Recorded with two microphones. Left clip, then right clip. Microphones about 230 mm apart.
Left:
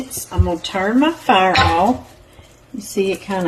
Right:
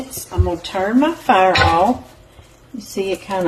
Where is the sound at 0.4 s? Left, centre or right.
Left.